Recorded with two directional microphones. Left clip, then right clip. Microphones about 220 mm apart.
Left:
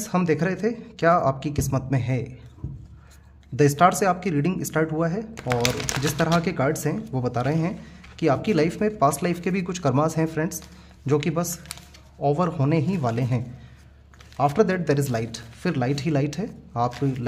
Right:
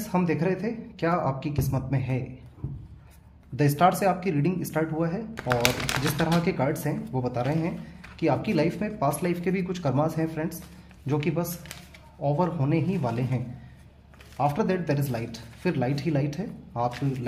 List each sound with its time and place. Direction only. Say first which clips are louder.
0.0 s speech: left 3 dB; 40° left (ahead or behind)
3.5 s speech: left 4 dB; 35° left (ahead or behind)
5.3 s speech: even; 10° left (ahead or behind)
6.3 s speech: left 3 dB; 35° left (ahead or behind)